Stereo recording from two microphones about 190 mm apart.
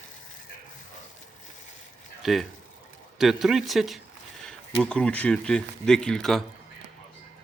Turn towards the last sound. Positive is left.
turn(degrees=0)  # may be behind; listen again after turning